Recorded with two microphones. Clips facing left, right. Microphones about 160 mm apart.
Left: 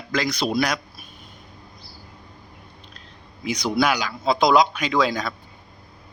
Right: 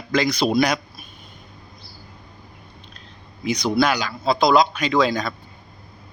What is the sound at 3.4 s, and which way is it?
A man's voice, 10° left (ahead or behind).